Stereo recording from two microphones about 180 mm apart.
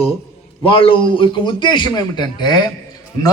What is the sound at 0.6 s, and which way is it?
A man's voice, 30° left (ahead or behind).